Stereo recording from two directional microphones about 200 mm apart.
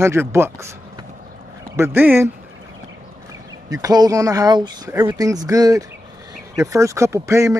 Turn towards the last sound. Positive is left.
turn(degrees=-15)  # may be behind; listen again after turning